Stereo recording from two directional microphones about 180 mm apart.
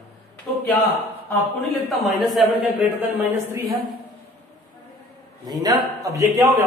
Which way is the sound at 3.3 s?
15° right (ahead or behind).